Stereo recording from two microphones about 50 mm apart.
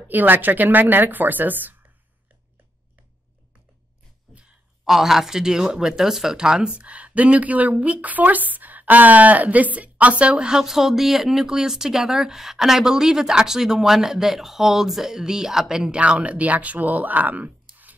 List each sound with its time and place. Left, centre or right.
0.1 s speech: right
4.8 s speech: centre
16.0 s speech: right